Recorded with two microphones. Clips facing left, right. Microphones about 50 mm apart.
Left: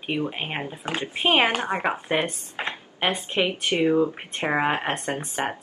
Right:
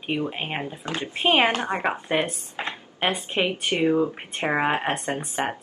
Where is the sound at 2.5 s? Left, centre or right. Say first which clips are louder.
Even; centre.